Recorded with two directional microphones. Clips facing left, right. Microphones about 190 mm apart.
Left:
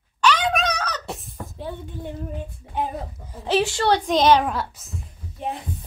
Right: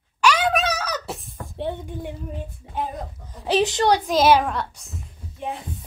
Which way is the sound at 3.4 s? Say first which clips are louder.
Right 1 dB; 20° right (ahead or behind).